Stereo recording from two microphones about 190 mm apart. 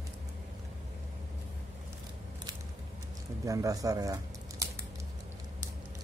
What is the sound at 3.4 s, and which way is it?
Speech, 15° right (ahead or behind).